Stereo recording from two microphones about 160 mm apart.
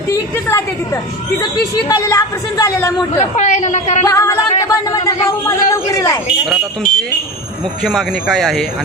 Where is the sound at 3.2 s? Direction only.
45° left (ahead or behind).